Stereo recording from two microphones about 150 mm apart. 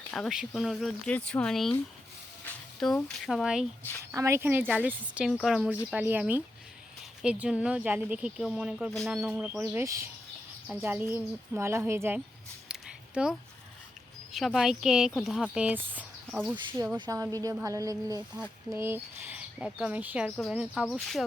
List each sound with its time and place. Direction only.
0.1 s speech: centre (ahead or behind)
2.8 s speech: centre (ahead or behind)
4.1 s speech: 20° right (ahead or behind)
14.3 s speech: centre (ahead or behind)
16.7 s a woman's voice: 20° right (ahead or behind); by 21.2 s centre (ahead or behind)